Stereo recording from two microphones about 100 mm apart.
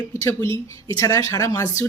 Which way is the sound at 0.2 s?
30° left (ahead or behind).